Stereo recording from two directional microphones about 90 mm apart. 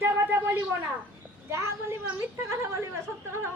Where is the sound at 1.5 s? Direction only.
30° right (ahead or behind).